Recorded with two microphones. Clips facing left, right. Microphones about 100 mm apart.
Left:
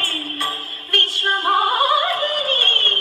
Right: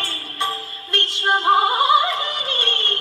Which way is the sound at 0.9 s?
20° right (ahead or behind).